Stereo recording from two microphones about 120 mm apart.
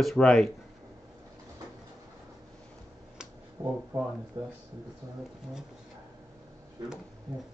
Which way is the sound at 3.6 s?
15° right (ahead or behind).